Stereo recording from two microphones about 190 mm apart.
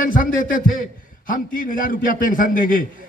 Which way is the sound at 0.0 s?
45° left (ahead or behind).